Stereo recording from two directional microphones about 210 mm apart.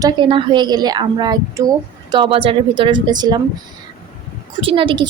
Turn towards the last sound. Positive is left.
turn(degrees=-25)  # may be behind; listen again after turning